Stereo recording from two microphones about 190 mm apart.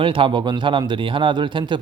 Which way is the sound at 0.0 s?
25° right (ahead or behind).